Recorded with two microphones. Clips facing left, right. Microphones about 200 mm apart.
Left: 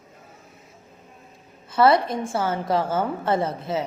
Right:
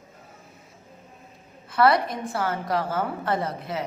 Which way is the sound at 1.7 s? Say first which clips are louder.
Left 2 dB; 25° left (ahead or behind).